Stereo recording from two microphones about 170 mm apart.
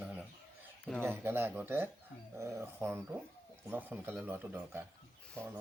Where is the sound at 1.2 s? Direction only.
10° right (ahead or behind).